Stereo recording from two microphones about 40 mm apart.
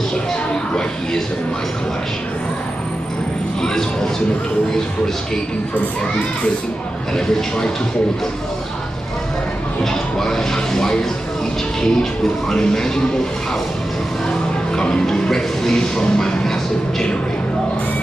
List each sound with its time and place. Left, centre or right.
9.8 s speech: centre
14.8 s speech: centre